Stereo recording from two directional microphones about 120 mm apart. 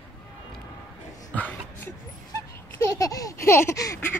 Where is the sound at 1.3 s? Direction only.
15° left (ahead or behind).